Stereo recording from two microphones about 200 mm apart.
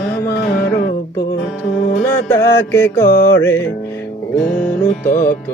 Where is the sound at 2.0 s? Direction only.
10° left (ahead or behind).